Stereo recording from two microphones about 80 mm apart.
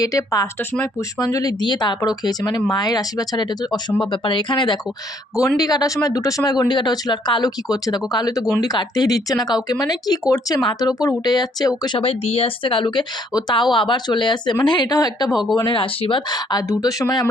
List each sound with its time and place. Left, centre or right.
0.0 s speech: left
1.6 s speech: left
2.0 s speech: left
4.0 s speech: left
5.5 s speech: left
12.6 s speech: left
14.9 s speech: left
15.5 s speech: left